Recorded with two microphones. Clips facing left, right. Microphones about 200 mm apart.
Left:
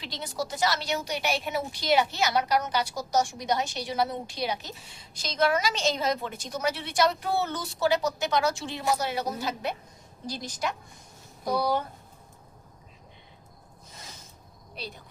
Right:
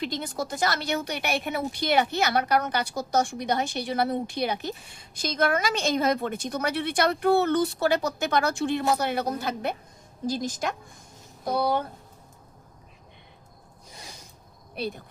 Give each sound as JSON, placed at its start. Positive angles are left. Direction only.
{"t": 0.0, "sound": "a woman's voice", "side_deg": -50}
{"t": 14.8, "sound": "a woman's voice", "side_deg": -55}